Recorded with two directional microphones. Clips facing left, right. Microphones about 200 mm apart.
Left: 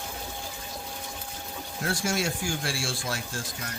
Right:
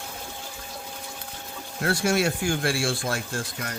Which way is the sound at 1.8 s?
60° right (ahead or behind).